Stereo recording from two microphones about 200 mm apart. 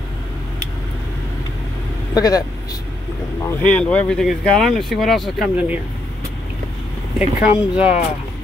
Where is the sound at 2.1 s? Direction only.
20° left (ahead or behind); by 5.8 s 5° right (ahead or behind).